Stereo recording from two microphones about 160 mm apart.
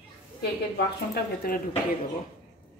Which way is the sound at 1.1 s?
70° left (ahead or behind).